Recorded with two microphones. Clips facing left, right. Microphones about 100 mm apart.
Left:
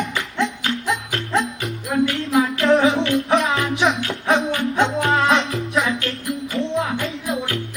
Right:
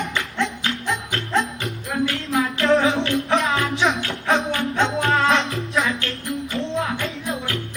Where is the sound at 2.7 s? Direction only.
35° right (ahead or behind).